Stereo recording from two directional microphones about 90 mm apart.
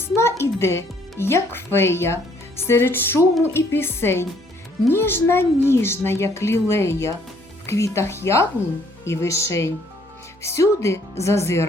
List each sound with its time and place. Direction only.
0.0 s a child's voice: 30° left (ahead or behind)